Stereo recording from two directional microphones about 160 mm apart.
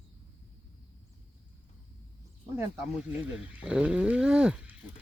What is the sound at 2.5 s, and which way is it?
Speech, 15° right (ahead or behind).